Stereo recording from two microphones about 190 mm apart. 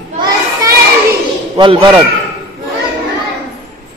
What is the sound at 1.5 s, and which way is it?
Speech, 25° right (ahead or behind).